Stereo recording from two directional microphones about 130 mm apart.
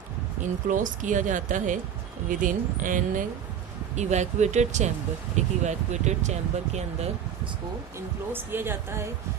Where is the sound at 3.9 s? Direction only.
65° right (ahead or behind).